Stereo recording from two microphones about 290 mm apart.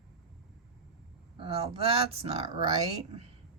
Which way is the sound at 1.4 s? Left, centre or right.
Centre.